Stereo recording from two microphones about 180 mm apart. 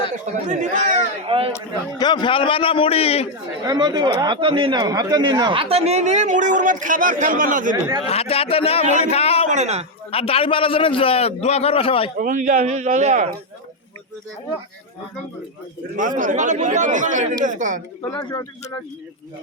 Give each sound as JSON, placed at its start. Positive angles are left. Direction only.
{"t": 0.4, "sound": "speech", "side_deg": -40}
{"t": 1.3, "sound": "speech", "side_deg": -30}
{"t": 1.5, "sound": "a man's voice", "side_deg": 25}
{"t": 3.6, "sound": "speech", "side_deg": -20}
{"t": 8.0, "sound": "a man's voice", "side_deg": 35}
{"t": 9.5, "sound": "speech", "side_deg": -40}
{"t": 10.1, "sound": "a man's voice", "side_deg": 30}
{"t": 12.2, "sound": "a man's voice", "side_deg": -45}
{"t": 16.0, "sound": "a man's voice", "side_deg": -45}
{"t": 18.1, "sound": "a man's voice", "side_deg": 20}